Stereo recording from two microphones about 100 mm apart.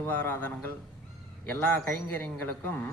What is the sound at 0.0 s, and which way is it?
Speech, 20° left (ahead or behind).